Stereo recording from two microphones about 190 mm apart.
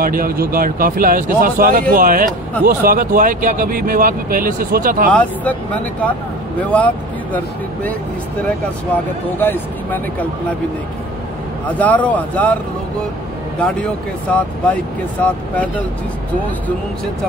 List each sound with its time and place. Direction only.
0.0 s speech: 50° right (ahead or behind)
5.1 s speech: 10° left (ahead or behind)
11.8 s speech: 10° left (ahead or behind)
13.6 s speech: 5° left (ahead or behind)